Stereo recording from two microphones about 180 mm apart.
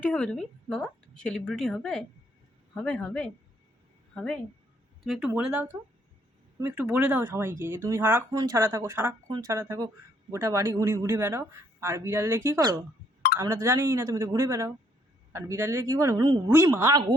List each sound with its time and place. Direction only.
0.0 s a woman's voice: 5° left (ahead or behind); by 17.0 s 15° right (ahead or behind)